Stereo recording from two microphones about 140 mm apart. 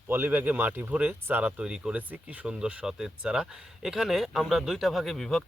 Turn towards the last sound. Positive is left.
turn(degrees=0)  # may be behind; listen again after turning